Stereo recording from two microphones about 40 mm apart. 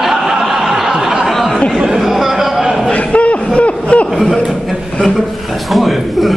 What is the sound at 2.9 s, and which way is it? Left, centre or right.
Crowd, left.